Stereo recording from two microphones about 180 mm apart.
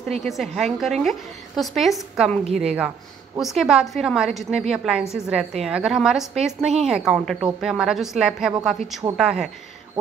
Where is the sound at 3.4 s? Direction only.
Centre (ahead or behind).